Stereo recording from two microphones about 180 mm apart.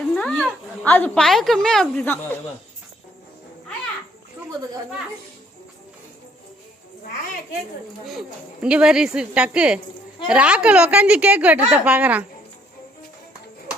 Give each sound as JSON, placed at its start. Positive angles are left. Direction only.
{"t": 0.2, "sound": "a woman's voice", "side_deg": 5}
{"t": 8.6, "sound": "a woman's voice", "side_deg": -5}